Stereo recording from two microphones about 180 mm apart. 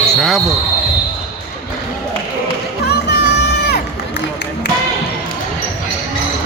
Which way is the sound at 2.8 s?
65° left (ahead or behind).